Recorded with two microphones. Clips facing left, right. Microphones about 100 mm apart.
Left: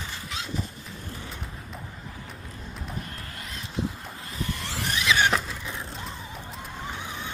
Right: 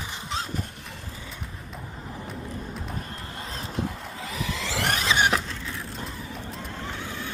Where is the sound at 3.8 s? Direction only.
75° right (ahead or behind).